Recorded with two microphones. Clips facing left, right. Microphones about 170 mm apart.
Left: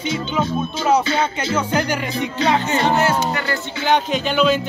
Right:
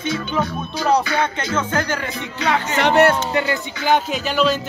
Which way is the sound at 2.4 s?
25° left (ahead or behind).